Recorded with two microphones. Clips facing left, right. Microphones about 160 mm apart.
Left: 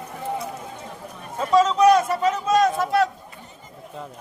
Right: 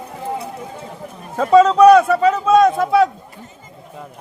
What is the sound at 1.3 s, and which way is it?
Speech, 60° right (ahead or behind).